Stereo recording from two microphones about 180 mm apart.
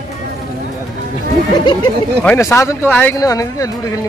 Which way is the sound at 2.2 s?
10° left (ahead or behind).